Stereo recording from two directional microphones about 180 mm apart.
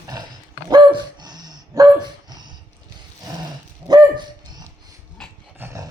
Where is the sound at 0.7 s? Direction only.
25° right (ahead or behind).